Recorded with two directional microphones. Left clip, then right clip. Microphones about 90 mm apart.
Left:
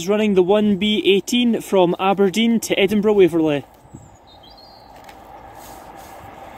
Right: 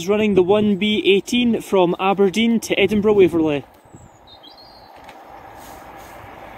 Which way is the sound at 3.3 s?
10° left (ahead or behind).